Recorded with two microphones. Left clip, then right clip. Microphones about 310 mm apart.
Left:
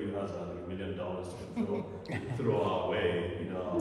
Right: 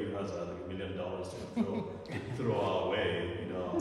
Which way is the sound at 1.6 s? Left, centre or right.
Right.